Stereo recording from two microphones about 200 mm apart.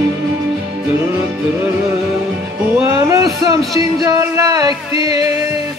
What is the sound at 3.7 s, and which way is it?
Speech, 15° right (ahead or behind).